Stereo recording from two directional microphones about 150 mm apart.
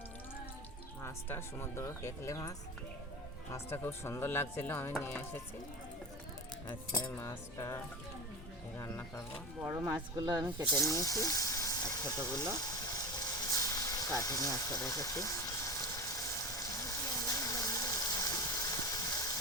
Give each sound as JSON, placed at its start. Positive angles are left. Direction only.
{"t": 1.0, "sound": "speech", "side_deg": 15}
{"t": 7.0, "sound": "speech", "side_deg": 15}
{"t": 8.8, "sound": "speech", "side_deg": 15}
{"t": 9.6, "sound": "speech", "side_deg": -15}
{"t": 9.9, "sound": "speech", "side_deg": -25}
{"t": 10.8, "sound": "speech", "side_deg": 20}
{"t": 12.9, "sound": "vehicle", "side_deg": 25}
{"t": 14.2, "sound": "a sound", "side_deg": 20}